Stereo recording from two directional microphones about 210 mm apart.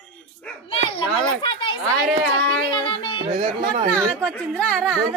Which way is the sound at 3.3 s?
25° right (ahead or behind).